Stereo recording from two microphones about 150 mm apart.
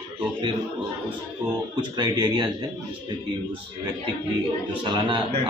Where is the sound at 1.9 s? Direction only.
30° right (ahead or behind).